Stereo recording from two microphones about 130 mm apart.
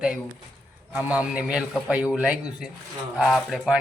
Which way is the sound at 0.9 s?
10° right (ahead or behind).